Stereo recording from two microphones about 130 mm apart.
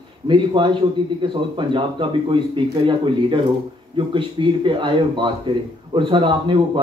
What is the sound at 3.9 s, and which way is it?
A man's voice, 40° right (ahead or behind).